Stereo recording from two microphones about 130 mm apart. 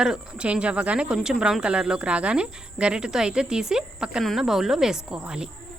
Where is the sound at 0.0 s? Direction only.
5° right (ahead or behind).